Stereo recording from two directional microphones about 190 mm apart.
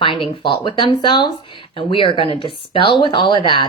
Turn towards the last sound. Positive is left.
turn(degrees=25)  # may be behind; listen again after turning